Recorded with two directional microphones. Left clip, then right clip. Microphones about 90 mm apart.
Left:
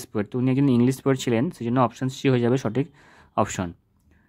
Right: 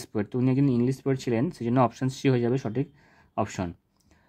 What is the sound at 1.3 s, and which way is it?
Speech, 15° left (ahead or behind).